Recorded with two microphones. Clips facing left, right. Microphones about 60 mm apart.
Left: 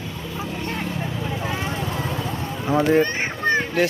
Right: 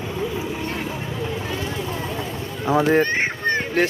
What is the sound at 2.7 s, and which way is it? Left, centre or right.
Speech, right.